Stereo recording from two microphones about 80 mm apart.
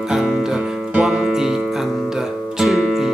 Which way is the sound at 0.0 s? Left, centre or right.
Centre.